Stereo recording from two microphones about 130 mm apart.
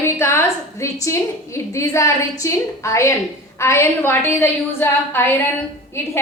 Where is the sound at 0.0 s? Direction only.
20° left (ahead or behind).